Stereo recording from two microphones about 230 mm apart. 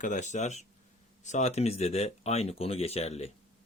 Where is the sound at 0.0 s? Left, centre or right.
Left.